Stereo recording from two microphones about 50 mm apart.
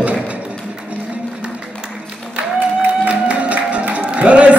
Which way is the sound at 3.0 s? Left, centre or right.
Right.